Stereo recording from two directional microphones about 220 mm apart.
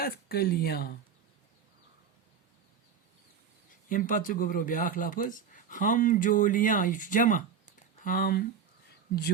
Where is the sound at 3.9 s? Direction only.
35° left (ahead or behind).